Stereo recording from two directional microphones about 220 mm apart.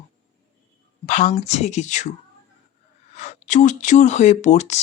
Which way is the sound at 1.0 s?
35° left (ahead or behind).